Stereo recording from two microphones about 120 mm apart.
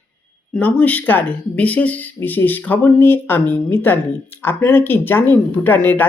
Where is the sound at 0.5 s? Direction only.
10° left (ahead or behind).